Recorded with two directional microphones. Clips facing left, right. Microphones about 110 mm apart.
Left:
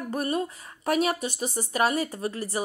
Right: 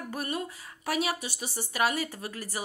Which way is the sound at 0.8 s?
45° left (ahead or behind).